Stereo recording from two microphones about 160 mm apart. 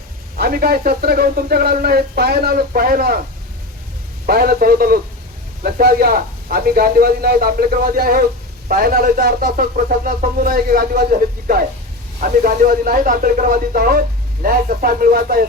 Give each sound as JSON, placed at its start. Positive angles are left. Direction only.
{"t": 0.3, "sound": "speech", "side_deg": -70}
{"t": 4.3, "sound": "speech", "side_deg": -70}